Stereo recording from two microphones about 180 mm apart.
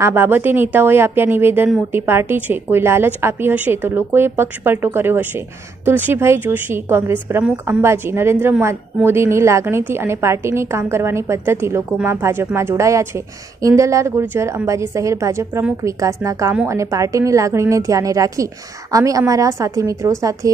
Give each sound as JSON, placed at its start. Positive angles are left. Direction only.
{"t": 0.0, "sound": "a woman's voice", "side_deg": -10}